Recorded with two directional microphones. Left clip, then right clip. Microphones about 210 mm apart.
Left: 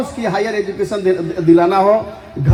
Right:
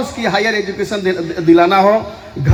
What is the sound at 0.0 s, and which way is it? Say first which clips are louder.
A man's voice: right 3 dB; 25° right (ahead or behind).